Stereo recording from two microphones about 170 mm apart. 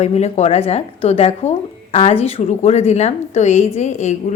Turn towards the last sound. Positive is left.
turn(degrees=45)  # may be behind; listen again after turning